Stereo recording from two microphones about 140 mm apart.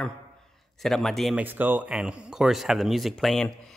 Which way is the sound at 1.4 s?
15° right (ahead or behind).